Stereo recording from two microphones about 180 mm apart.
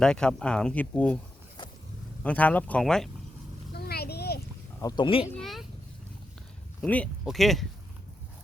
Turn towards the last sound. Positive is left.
turn(degrees=0)  # may be behind; listen again after turning